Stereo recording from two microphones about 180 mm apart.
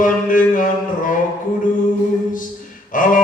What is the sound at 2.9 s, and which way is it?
Speech, 50° left (ahead or behind).